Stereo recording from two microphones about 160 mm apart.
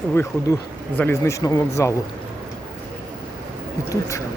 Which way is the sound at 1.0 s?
20° left (ahead or behind).